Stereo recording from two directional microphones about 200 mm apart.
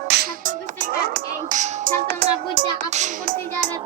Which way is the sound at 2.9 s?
40° right (ahead or behind).